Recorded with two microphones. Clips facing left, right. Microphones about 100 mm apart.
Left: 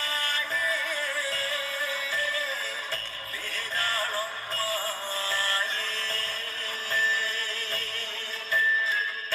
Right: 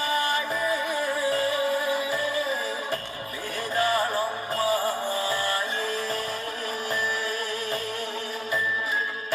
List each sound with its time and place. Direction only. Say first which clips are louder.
0.0 s music: right 7 dB; 15° right (ahead or behind)